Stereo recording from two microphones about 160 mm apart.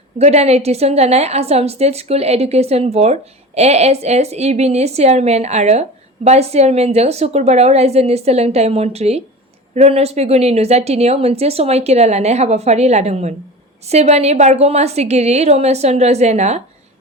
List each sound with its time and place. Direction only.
0.2 s a woman's voice: 40° right (ahead or behind)